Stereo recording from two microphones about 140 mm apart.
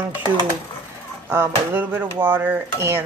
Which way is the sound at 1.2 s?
15° right (ahead or behind).